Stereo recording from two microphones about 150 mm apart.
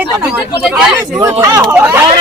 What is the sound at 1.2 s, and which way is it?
Speech, 20° right (ahead or behind).